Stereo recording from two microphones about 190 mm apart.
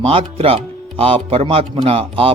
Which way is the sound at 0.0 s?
30° right (ahead or behind).